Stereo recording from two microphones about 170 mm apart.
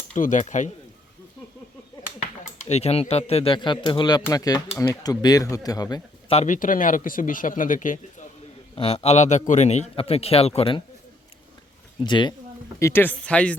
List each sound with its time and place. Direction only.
0.1 s speech: 45° left (ahead or behind)
2.2 s speech: 40° left (ahead or behind); by 6.3 s 25° left (ahead or behind)
6.3 s speech: 45° left (ahead or behind)
8.7 s a man's voice: 35° left (ahead or behind)
12.0 s speech: 25° left (ahead or behind)
12.8 s speech: 15° left (ahead or behind)